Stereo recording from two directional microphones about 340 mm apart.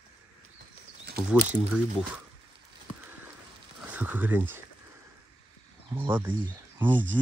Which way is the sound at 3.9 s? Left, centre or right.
Centre.